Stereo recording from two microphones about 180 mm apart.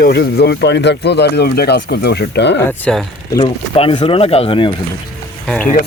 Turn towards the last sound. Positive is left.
turn(degrees=10)  # may be behind; listen again after turning